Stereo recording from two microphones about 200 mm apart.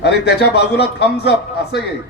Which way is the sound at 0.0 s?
55° left (ahead or behind).